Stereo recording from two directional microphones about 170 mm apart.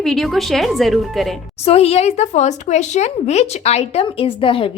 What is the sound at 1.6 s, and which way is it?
Speech, 35° left (ahead or behind).